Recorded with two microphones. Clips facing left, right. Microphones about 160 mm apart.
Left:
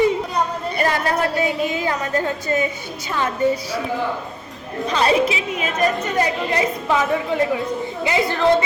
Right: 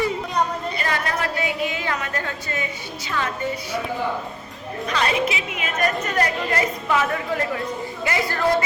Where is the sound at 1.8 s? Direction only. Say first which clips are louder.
Left 6 dB; 30° left (ahead or behind).